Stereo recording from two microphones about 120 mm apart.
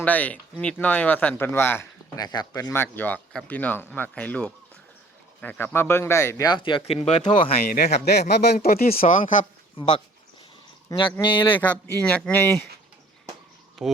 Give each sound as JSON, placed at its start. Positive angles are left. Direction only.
{"t": 0.0, "sound": "speech", "side_deg": 10}
{"t": 2.1, "sound": "speech", "side_deg": 35}
{"t": 2.5, "sound": "speech", "side_deg": 25}
{"t": 6.5, "sound": "speech", "side_deg": 45}
{"t": 8.5, "sound": "speech", "side_deg": 80}
{"t": 10.8, "sound": "speech", "side_deg": 35}
{"t": 11.5, "sound": "speech", "side_deg": 15}
{"t": 13.8, "sound": "speech", "side_deg": 0}